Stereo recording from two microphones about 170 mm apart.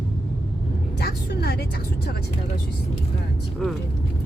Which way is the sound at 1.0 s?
70° left (ahead or behind).